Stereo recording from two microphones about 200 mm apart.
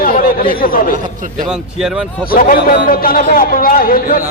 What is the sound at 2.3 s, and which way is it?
A man's voice, 45° left (ahead or behind).